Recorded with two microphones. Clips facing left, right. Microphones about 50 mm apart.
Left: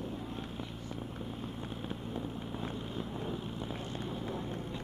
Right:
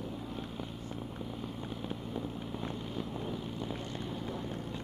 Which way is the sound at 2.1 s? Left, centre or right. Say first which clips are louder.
Right 1 dB; centre.